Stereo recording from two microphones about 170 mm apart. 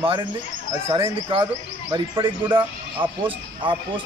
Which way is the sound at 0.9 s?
30° right (ahead or behind).